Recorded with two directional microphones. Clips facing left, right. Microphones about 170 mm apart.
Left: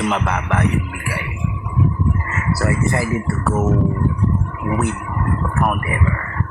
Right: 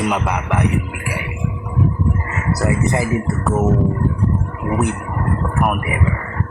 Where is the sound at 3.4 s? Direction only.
Centre (ahead or behind).